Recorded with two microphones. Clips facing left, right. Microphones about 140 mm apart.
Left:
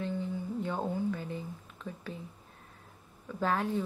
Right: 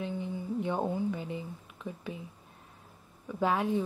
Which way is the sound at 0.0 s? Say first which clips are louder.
Left 1 dB; 15° right (ahead or behind).